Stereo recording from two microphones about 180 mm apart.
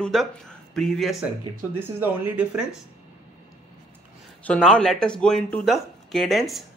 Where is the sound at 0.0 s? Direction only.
Centre (ahead or behind).